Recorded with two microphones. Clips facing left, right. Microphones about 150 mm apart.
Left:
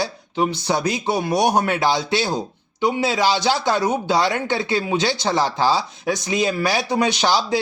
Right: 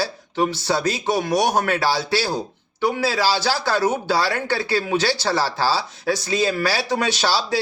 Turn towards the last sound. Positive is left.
turn(degrees=15)  # may be behind; listen again after turning